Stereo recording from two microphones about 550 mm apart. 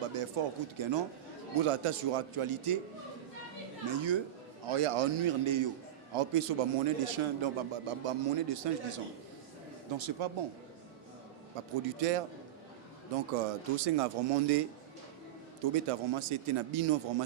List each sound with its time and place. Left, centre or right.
0.1 s speech: right
1.5 s speech: right
3.8 s speech: right
4.7 s speech: right
6.1 s a man's voice: right
9.9 s speech: right
11.9 s speech: right
13.3 s speech: right
15.7 s speech: right